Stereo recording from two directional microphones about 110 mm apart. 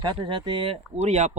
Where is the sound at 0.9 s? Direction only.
85° right.